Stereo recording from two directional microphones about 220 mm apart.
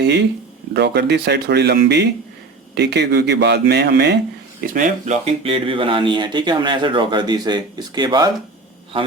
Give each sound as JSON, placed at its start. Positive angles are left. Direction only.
{"t": 0.0, "sound": "speech", "side_deg": -50}
{"t": 4.6, "sound": "speech", "side_deg": -35}